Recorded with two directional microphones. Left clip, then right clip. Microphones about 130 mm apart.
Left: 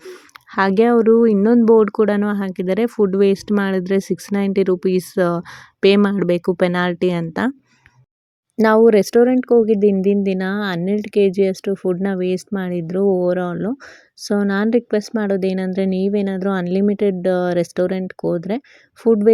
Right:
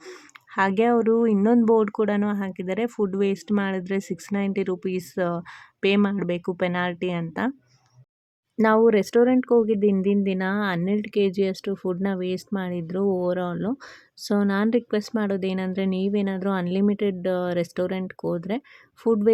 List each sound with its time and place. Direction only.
0.5 s speech: 50° left (ahead or behind)
8.5 s speech: 45° left (ahead or behind)